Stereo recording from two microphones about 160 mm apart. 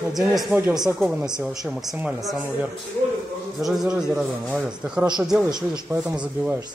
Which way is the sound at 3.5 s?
Centre (ahead or behind).